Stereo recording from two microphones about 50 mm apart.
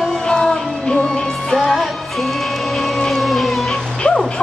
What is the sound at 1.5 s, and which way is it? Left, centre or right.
Music, centre.